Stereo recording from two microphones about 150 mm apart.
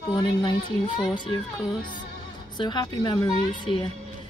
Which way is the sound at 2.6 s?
30° left (ahead or behind).